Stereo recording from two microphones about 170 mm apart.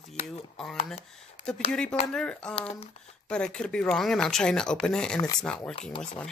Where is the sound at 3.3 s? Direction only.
5° left (ahead or behind).